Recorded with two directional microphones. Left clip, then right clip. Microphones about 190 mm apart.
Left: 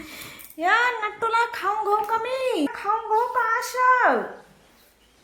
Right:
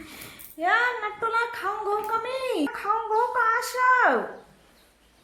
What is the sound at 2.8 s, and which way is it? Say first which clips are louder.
Speech: left 1 dB; 15° left (ahead or behind).